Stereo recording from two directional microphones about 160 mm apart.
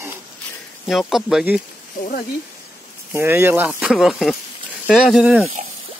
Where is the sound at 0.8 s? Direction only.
Centre (ahead or behind).